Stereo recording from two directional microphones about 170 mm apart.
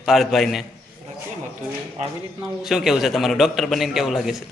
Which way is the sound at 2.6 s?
Centre (ahead or behind).